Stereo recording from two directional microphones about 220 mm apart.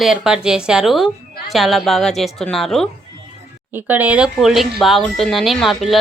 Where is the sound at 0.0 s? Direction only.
5° right (ahead or behind).